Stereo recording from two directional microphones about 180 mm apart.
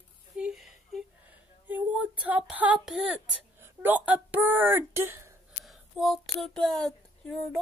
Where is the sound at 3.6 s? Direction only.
10° right (ahead or behind).